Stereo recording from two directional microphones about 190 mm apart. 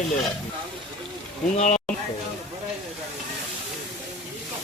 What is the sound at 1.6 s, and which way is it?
Speech, 40° left (ahead or behind).